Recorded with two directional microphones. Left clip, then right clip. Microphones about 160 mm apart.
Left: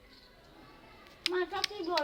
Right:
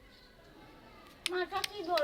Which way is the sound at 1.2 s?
20° left (ahead or behind).